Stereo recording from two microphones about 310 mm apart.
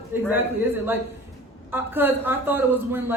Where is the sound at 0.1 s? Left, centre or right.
Centre.